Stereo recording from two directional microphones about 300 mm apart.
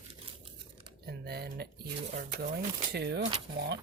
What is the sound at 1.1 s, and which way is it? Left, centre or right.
Speech, right.